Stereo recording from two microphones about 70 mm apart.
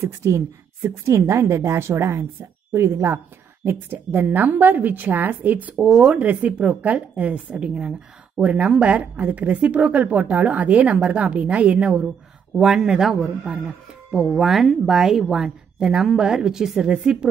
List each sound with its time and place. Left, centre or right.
0.0 s a woman's voice: right
5.9 s a man's voice: centre
6.1 s a woman's voice: right